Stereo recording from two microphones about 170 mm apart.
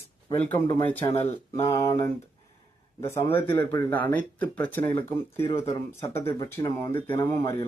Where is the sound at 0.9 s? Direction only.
15° left (ahead or behind).